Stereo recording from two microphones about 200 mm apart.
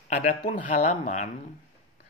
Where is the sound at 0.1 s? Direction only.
35° left (ahead or behind).